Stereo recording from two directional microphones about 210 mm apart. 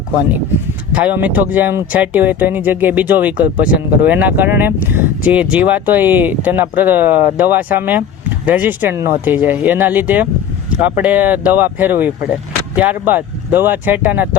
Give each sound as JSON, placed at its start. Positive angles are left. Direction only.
{"t": 0.9, "sound": "speech", "side_deg": -10}